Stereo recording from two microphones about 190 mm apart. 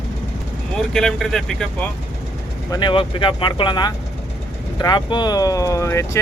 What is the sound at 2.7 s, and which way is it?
Speech, 25° left (ahead or behind).